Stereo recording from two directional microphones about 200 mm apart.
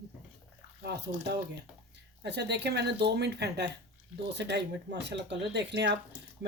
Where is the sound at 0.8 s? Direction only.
55° right (ahead or behind).